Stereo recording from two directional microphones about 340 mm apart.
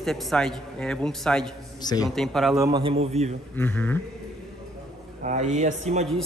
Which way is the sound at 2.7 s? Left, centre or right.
Centre.